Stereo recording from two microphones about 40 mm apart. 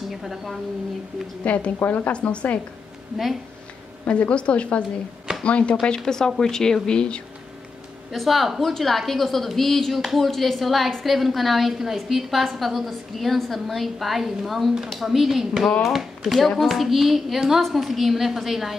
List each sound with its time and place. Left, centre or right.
0.1 s a woman's voice: centre
1.4 s a woman's voice: left
1.9 s speech: left
2.1 s speech: left
4.1 s a woman's voice: left
5.9 s a woman's voice: centre
8.1 s a woman's voice: centre